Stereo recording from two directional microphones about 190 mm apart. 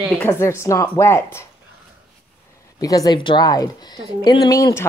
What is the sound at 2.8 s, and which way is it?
Speech, 20° left (ahead or behind).